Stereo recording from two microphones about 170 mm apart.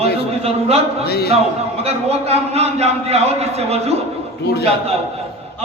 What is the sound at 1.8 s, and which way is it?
A man's voice, 35° right (ahead or behind).